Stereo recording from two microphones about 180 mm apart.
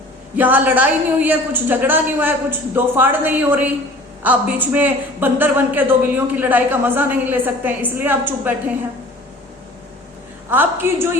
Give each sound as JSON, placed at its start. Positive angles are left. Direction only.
{"t": 0.3, "sound": "a man's voice", "side_deg": -10}
{"t": 10.5, "sound": "a man's voice", "side_deg": -10}